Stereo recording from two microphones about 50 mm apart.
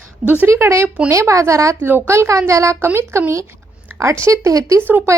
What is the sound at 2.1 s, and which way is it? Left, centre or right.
Speech, right.